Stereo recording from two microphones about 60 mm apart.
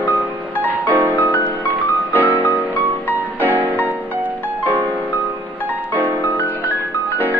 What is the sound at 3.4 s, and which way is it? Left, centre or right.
Music, right.